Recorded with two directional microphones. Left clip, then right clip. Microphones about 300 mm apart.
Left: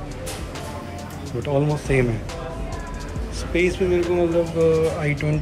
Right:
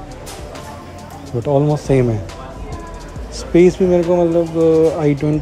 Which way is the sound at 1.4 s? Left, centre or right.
Centre.